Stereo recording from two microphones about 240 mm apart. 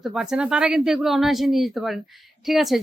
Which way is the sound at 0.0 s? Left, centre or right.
Centre.